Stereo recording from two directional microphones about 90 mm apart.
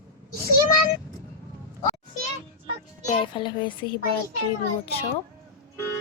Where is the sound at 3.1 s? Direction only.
65° left (ahead or behind).